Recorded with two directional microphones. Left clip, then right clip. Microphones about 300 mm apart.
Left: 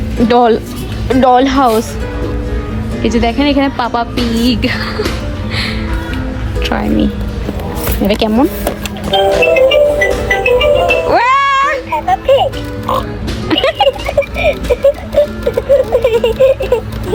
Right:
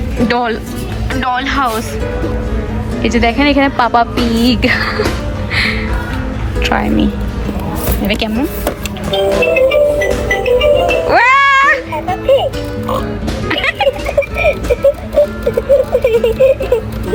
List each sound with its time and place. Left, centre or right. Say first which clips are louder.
0.3 s speech: left 8 dB; centre
3.0 s speech: right 1 dB; centre
6.6 s speech: right 1 dB; centre
7.9 s music: left 4 dB; centre
13.5 s music: left 3 dB; centre